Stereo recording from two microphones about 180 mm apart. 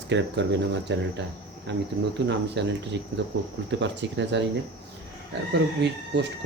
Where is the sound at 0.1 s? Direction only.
80° right.